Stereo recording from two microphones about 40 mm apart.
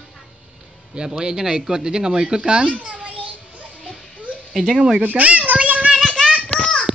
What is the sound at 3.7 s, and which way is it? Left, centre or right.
Music, left.